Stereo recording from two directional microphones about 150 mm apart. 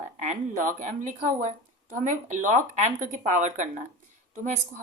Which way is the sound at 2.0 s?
55° right (ahead or behind).